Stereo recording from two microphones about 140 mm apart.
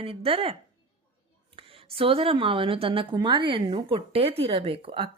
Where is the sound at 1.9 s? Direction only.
40° right (ahead or behind).